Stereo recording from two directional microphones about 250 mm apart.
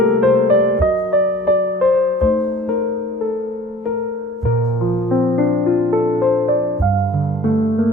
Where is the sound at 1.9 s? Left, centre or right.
Centre.